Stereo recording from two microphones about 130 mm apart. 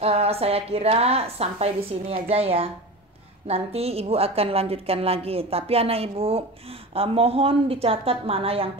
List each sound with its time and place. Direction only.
0.0 s a woman's voice: 50° right (ahead or behind)